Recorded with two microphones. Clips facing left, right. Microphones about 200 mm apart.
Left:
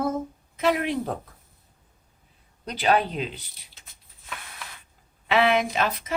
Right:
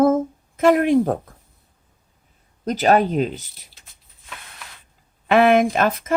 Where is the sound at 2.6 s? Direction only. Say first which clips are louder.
Right 6 dB; 45° right (ahead or behind).